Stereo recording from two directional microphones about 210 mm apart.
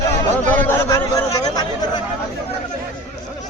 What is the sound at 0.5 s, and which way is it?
A man's voice, 10° left (ahead or behind).